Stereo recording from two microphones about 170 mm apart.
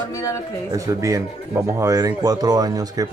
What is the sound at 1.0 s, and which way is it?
Speech, 20° right (ahead or behind).